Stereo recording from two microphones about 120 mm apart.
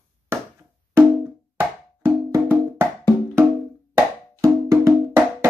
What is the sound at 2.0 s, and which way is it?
Music, 20° right (ahead or behind).